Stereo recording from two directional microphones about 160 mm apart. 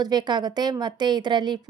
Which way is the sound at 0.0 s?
25° right (ahead or behind).